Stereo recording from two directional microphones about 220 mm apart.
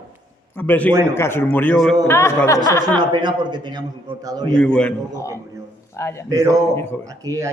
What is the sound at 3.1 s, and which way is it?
Speech, 20° right (ahead or behind).